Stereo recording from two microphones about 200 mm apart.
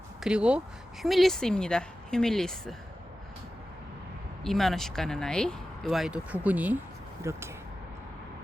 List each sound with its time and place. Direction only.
0.2 s speech: 5° right (ahead or behind)
4.4 s speech: centre (ahead or behind)